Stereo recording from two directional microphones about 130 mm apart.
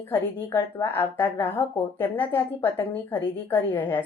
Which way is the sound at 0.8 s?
15° left (ahead or behind).